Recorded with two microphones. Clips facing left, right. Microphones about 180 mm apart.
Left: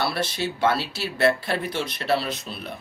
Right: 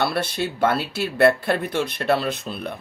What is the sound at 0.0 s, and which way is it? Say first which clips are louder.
Speech: right 3 dB; 55° right (ahead or behind).